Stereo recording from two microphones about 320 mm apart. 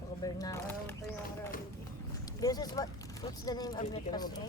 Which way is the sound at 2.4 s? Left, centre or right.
Centre.